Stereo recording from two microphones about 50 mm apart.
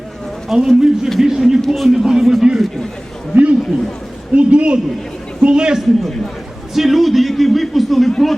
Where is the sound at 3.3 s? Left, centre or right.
Right.